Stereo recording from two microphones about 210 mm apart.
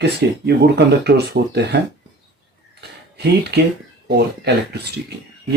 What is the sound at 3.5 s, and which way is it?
Speech, 50° right (ahead or behind).